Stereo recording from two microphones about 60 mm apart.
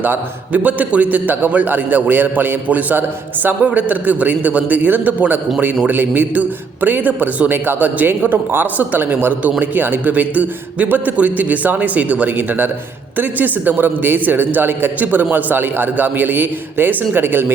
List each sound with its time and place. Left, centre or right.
0.0 s a man's voice: right